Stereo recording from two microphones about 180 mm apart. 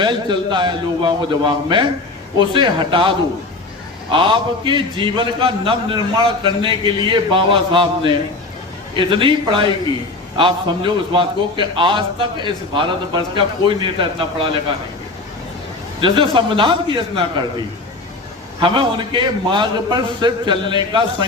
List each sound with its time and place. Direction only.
0.0 s a man's voice: 25° right (ahead or behind)
16.0 s a man's voice: 30° right (ahead or behind)
18.6 s a man's voice: 30° right (ahead or behind)